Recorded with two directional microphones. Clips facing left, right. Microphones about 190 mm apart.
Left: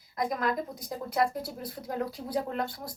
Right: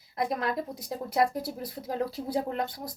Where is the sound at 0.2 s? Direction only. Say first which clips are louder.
Even; 25° right (ahead or behind).